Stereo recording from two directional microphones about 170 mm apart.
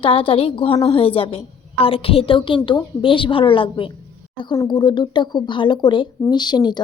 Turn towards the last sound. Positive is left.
turn(degrees=25)  # may be behind; listen again after turning